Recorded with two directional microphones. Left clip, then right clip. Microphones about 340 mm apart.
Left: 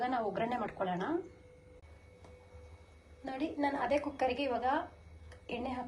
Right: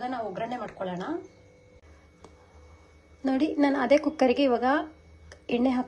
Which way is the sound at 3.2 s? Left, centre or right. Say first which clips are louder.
Right 10 dB; right.